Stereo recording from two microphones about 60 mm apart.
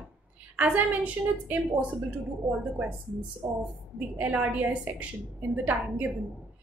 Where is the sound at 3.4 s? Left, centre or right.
Right.